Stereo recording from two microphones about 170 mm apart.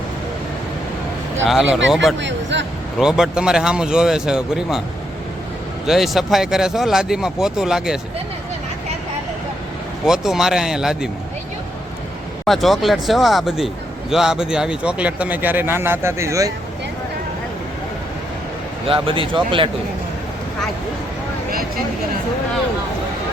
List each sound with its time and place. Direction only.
1.5 s speech: centre (ahead or behind)
2.1 s speech: 90° right
3.0 s speech: 5° right (ahead or behind)
5.8 s speech: centre (ahead or behind)
10.1 s speech: centre (ahead or behind)
12.5 s speech: centre (ahead or behind); by 16.5 s 15° right (ahead or behind)
18.9 s speech: 30° right (ahead or behind)